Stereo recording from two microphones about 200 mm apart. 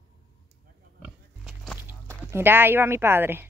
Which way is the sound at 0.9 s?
Centre (ahead or behind).